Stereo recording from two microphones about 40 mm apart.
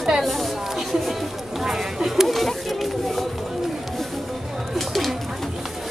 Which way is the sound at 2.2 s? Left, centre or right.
Centre.